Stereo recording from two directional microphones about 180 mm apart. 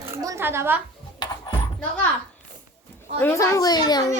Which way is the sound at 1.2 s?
25° left (ahead or behind).